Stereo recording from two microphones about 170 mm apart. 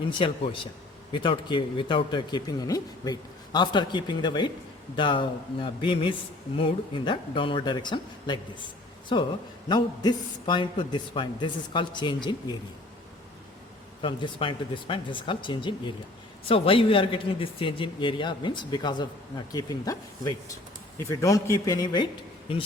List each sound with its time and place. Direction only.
0.0 s a man's voice: 30° left (ahead or behind)
14.0 s a man's voice: 30° left (ahead or behind)